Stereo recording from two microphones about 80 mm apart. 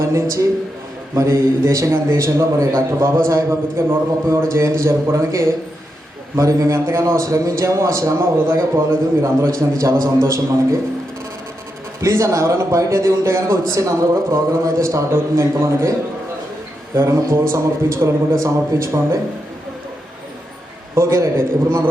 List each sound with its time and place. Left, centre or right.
0.0 s a man's voice: right
11.9 s a man's voice: right
20.9 s a man's voice: right